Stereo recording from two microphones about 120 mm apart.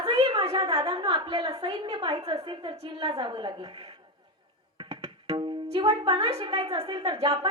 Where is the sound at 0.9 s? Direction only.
35° right (ahead or behind).